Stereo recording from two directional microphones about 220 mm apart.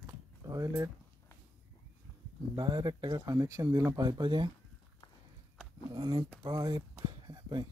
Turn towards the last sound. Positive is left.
turn(degrees=-20)  # may be behind; listen again after turning